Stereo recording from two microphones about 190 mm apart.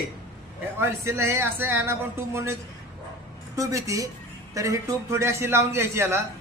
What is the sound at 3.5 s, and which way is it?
A man's voice, 15° right (ahead or behind).